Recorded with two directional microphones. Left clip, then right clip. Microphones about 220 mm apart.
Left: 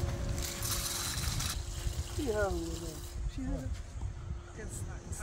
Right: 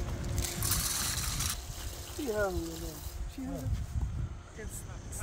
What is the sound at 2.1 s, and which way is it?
Speech, 15° right (ahead or behind).